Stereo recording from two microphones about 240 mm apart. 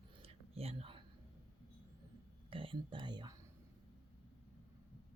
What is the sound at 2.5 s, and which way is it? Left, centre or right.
Speech, right.